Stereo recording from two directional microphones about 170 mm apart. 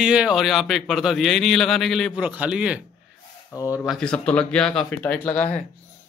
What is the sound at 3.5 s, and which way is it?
Speech, 20° left (ahead or behind).